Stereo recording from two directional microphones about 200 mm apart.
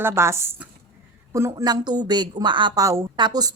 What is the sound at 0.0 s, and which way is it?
A woman's voice, 10° right (ahead or behind).